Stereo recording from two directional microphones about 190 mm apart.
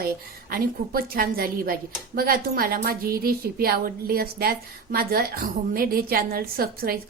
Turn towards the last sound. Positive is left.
turn(degrees=-50)  # may be behind; listen again after turning